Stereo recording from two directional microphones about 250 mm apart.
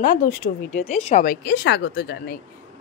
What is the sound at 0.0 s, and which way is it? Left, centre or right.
A woman's voice, left.